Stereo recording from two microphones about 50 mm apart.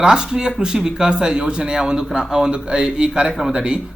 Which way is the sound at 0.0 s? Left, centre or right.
Centre.